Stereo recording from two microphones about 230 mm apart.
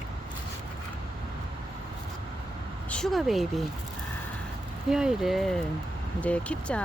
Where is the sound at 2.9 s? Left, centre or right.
Centre.